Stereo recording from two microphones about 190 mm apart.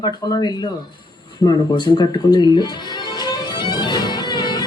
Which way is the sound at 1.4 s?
20° left (ahead or behind).